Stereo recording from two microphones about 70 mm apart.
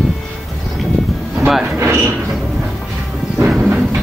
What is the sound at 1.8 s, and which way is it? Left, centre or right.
Mechanisms, right.